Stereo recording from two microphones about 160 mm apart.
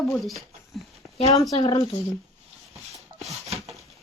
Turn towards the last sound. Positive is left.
turn(degrees=-40)  # may be behind; listen again after turning